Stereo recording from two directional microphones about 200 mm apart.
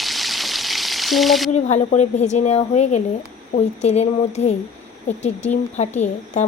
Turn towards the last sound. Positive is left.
turn(degrees=35)  # may be behind; listen again after turning